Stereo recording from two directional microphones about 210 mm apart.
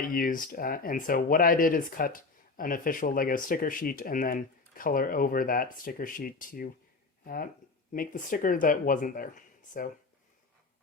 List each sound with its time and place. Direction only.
0.1 s speech: 40° left (ahead or behind)
7.9 s speech: 40° left (ahead or behind)